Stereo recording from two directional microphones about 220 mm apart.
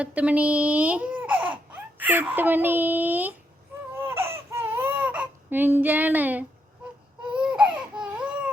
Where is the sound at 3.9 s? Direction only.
10° right (ahead or behind).